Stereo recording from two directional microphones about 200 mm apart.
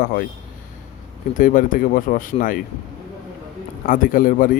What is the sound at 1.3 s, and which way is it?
Speech, 40° left (ahead or behind).